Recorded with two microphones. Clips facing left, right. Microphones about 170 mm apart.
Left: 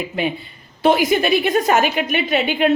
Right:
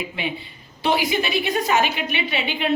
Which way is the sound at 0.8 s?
50° left (ahead or behind).